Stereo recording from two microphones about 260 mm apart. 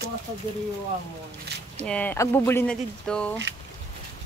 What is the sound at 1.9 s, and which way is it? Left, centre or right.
Speech, centre.